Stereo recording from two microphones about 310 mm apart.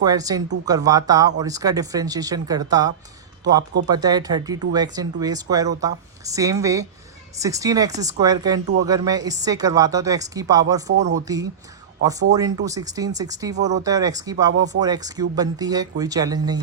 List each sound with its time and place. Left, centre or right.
0.0 s speech: centre